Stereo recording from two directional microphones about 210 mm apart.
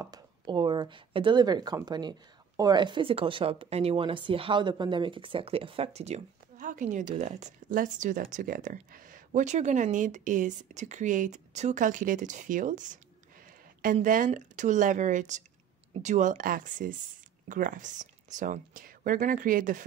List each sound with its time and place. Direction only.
0.0 s speech: 20° right (ahead or behind); by 19.8 s 40° right (ahead or behind)